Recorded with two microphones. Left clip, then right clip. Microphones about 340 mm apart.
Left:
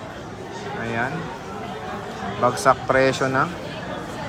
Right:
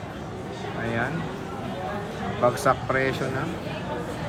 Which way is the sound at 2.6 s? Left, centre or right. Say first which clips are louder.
Left 5 dB; centre.